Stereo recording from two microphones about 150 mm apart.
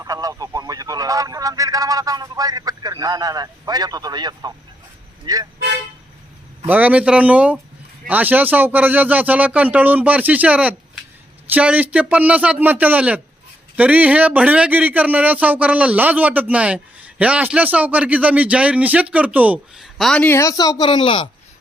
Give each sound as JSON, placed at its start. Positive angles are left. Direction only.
{"t": 0.0, "sound": "speech", "side_deg": -25}
{"t": 6.7, "sound": "a man's voice", "side_deg": -10}